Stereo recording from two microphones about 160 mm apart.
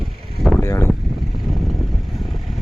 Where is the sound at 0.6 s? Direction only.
15° left (ahead or behind).